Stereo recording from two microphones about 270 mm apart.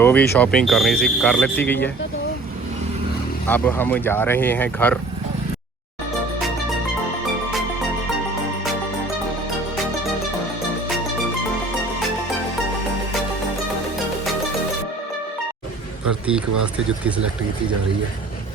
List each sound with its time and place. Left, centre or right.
0.0 s speech: centre
3.4 s speech: centre